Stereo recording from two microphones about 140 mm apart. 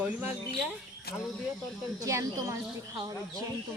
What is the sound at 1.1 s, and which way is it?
Speech, 90° left.